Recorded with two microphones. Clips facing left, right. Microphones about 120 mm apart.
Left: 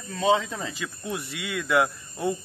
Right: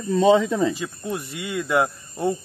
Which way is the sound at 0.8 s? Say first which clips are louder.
Right 4 dB; 35° right (ahead or behind).